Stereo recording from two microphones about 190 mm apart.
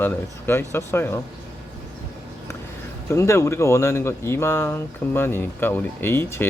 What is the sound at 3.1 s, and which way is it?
Speech, 15° left (ahead or behind).